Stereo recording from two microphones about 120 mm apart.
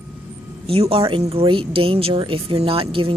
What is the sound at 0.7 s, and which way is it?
Speech, 55° right (ahead or behind).